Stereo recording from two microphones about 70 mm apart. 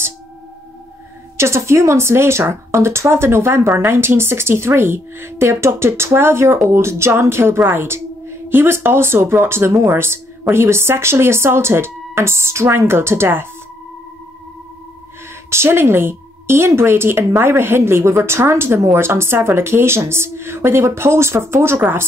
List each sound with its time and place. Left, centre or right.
1.3 s speech: right
15.5 s speech: right